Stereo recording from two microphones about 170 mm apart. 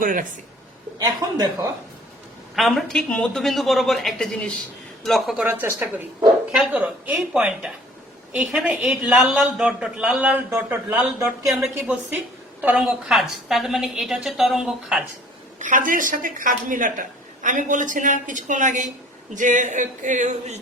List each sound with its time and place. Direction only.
0.0 s speech: 50° right (ahead or behind)
0.9 s speech: 20° right (ahead or behind)
2.6 s a woman's voice: centre (ahead or behind)
5.5 s speech: 15° right (ahead or behind)
6.6 s a woman's voice: 5° right (ahead or behind)
15.5 s speech: 50° right (ahead or behind)